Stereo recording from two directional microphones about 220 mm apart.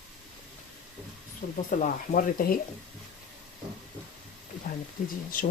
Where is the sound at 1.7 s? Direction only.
35° left (ahead or behind).